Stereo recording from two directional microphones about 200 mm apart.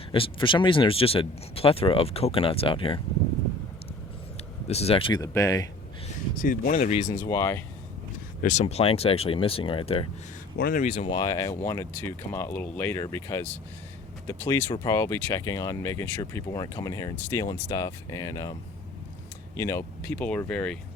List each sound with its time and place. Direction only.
0.1 s speech: 25° left (ahead or behind)
4.7 s speech: 30° left (ahead or behind)
6.4 s speech: 40° left (ahead or behind)
7.2 s speech: 15° left (ahead or behind)
8.4 s speech: 35° left (ahead or behind)
10.6 s speech: 45° left (ahead or behind)
10.9 s speech: 20° left (ahead or behind)
19.5 s speech: 15° left (ahead or behind)